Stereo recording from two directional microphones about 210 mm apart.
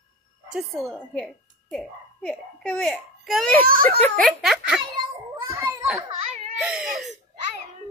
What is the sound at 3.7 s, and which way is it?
Speech, 40° right (ahead or behind).